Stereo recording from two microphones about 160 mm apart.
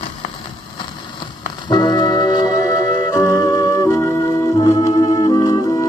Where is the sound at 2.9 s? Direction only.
20° left (ahead or behind).